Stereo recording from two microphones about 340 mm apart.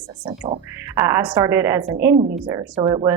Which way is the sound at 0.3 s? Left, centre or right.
Centre.